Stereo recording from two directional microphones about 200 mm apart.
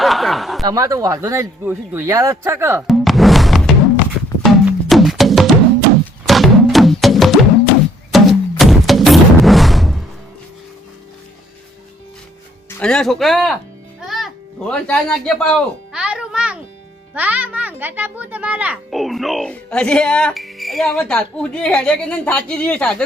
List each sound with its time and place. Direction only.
0.0 s speech: centre (ahead or behind)
0.6 s speech: 15° right (ahead or behind)
2.8 s music: centre (ahead or behind)
12.8 s a child's voice: 5° left (ahead or behind)